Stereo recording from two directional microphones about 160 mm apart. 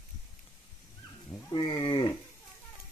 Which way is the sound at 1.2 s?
30° left (ahead or behind).